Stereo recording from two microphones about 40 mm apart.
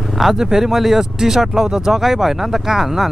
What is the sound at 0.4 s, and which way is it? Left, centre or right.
Speech, centre.